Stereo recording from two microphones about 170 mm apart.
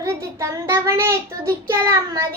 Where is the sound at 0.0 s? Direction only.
20° right (ahead or behind).